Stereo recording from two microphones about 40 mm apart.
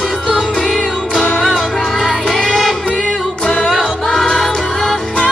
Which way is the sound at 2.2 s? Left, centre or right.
Centre.